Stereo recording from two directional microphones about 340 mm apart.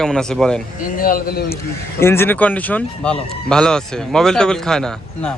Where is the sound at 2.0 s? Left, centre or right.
Centre.